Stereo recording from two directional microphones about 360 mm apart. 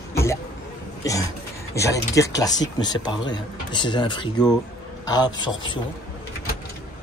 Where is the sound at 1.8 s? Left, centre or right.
Centre.